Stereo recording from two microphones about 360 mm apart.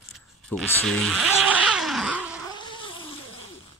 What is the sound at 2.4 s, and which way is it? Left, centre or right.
Cat, centre.